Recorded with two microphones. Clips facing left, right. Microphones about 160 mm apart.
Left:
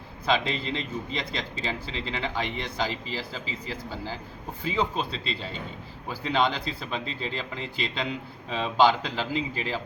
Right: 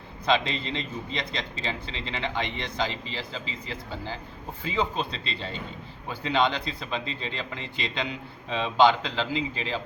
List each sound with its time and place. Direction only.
0.3 s a man's voice: 5° left (ahead or behind)